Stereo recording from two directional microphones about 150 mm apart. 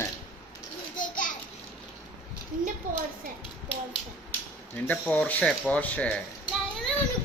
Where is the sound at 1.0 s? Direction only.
60° left (ahead or behind).